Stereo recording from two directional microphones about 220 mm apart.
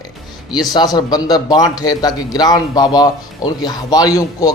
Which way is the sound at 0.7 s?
20° left (ahead or behind).